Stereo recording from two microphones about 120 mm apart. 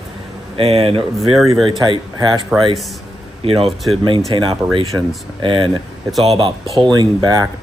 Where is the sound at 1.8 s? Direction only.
40° right (ahead or behind).